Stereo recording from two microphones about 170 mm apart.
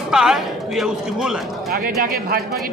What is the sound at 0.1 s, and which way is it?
Speech, 5° right (ahead or behind).